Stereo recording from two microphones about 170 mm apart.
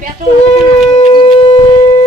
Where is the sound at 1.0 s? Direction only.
30° left (ahead or behind).